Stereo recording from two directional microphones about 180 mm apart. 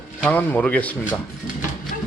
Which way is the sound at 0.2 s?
10° left (ahead or behind).